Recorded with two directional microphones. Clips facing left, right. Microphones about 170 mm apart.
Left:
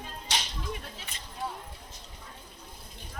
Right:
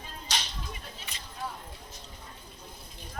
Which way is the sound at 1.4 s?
25° left (ahead or behind).